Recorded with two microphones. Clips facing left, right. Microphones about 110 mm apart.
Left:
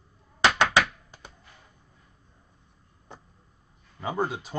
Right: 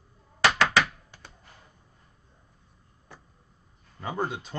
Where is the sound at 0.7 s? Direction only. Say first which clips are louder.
Left 1 dB; 15° left (ahead or behind).